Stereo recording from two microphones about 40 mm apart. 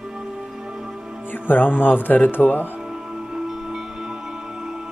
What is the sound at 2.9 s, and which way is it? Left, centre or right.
Music, centre.